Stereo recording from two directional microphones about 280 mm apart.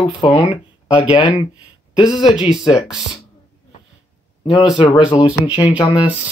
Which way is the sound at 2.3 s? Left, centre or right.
Centre.